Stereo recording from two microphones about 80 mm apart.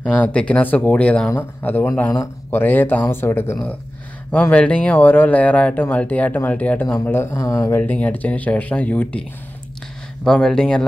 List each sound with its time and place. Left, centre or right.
0.0 s speech: centre
1.3 s speech: left
4.3 s speech: centre; by 7.7 s left
7.7 s speech: left
10.2 s speech: centre